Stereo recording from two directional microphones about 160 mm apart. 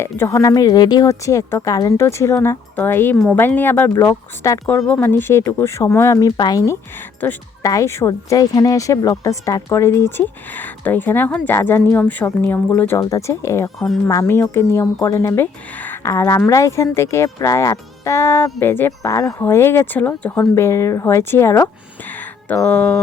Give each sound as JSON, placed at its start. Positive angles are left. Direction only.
{"t": 0.0, "sound": "speech", "side_deg": 15}
{"t": 4.8, "sound": "speech", "side_deg": 5}
{"t": 7.2, "sound": "a woman's voice", "side_deg": 10}
{"t": 13.7, "sound": "speech", "side_deg": 0}
{"t": 14.1, "sound": "speech", "side_deg": 15}